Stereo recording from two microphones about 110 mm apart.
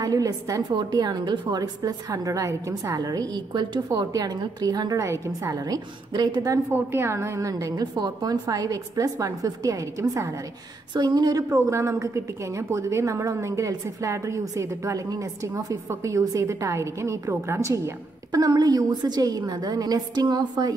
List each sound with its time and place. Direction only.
0.0 s a woman's voice: 35° right (ahead or behind)
6.7 s a woman's voice: 20° right (ahead or behind)
11.0 s a woman's voice: 40° right (ahead or behind)
11.5 s a woman's voice: 25° right (ahead or behind)